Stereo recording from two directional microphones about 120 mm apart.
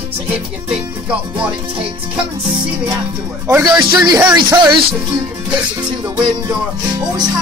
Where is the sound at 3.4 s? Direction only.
35° right (ahead or behind).